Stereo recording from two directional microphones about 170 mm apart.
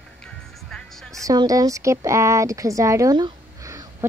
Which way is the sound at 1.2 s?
20° right (ahead or behind).